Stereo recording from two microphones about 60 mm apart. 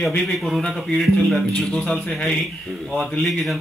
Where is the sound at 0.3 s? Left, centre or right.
Centre.